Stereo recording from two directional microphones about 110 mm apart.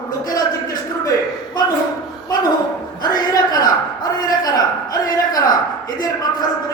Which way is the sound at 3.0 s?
35° left (ahead or behind).